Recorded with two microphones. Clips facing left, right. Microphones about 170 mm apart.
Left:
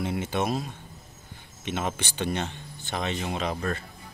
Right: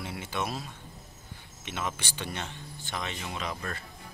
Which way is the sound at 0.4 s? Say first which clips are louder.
Left 4 dB; 20° left (ahead or behind).